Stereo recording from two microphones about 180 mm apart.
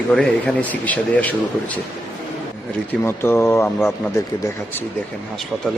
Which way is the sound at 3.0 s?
15° left (ahead or behind).